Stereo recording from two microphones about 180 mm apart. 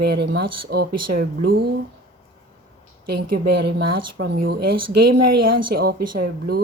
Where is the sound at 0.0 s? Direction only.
65° right (ahead or behind).